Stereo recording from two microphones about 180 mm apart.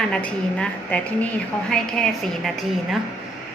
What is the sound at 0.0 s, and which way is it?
A woman's voice, 5° left (ahead or behind).